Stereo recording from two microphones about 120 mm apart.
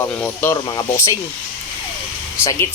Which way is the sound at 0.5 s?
35° left (ahead or behind).